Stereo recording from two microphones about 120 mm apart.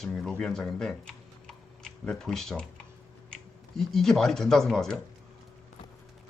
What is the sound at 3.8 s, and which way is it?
Speech, 5° left (ahead or behind).